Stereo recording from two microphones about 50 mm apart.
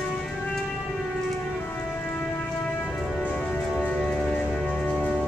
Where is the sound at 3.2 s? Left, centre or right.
Left.